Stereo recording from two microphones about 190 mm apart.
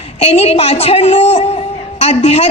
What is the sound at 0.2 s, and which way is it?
A woman's voice, 30° left (ahead or behind).